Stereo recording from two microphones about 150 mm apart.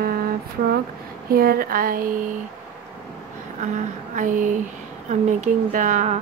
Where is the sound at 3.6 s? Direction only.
55° right (ahead or behind).